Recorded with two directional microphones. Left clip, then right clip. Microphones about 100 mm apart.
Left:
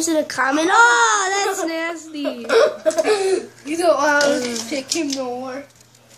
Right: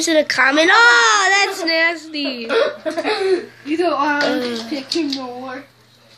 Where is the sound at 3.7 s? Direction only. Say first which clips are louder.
Left 2 dB; 50° left (ahead or behind).